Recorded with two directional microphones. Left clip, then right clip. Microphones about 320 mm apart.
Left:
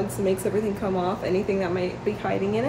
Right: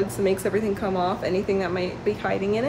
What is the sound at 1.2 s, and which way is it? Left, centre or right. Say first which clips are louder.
Speech: right 1 dB; centre.